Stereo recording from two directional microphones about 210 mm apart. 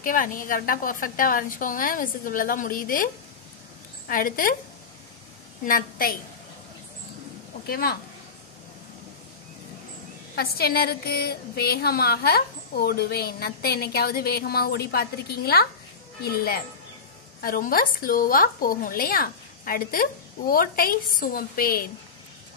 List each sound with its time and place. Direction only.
0.0 s a woman's voice: 40° left (ahead or behind)
4.1 s a woman's voice: 40° left (ahead or behind)
5.7 s a woman's voice: 45° left (ahead or behind)
7.6 s a woman's voice: 45° left (ahead or behind)
10.3 s a woman's voice: 45° left (ahead or behind)